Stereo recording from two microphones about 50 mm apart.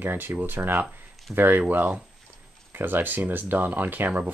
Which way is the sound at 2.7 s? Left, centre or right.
Right.